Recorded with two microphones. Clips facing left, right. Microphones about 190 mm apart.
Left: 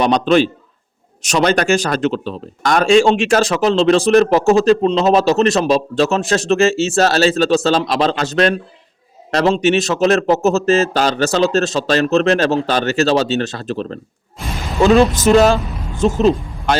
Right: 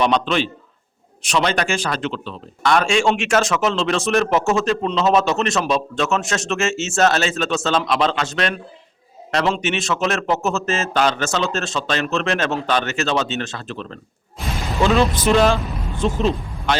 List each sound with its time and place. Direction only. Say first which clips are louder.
0.0 s speech: left 6 dB; 40° left (ahead or behind)
14.4 s a sound: left 1 dB; centre (ahead or behind)
14.8 s speech: left 6 dB; 45° left (ahead or behind)